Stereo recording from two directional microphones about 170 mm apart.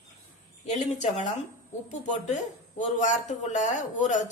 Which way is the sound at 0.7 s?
45° left (ahead or behind).